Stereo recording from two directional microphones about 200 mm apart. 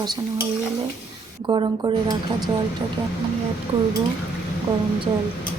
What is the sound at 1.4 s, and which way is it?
Speech, 20° right (ahead or behind).